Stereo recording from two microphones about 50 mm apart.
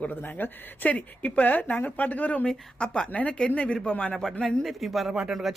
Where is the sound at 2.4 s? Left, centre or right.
Centre.